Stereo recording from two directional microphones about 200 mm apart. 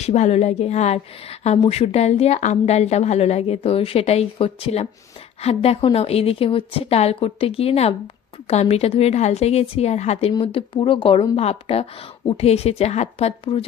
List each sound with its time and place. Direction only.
0.0 s a woman's voice: 35° left (ahead or behind)